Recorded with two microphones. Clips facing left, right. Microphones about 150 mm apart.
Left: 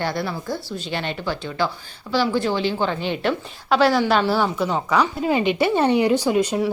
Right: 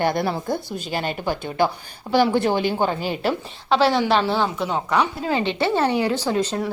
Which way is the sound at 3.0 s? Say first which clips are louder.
Even; 5° right (ahead or behind).